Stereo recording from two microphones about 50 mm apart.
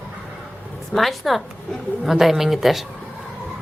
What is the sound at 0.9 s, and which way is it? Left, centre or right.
Speech, centre.